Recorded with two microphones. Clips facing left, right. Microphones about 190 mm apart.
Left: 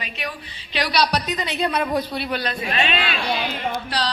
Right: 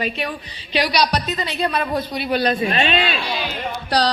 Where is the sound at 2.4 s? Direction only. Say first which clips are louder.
Right 8 dB; 35° right (ahead or behind).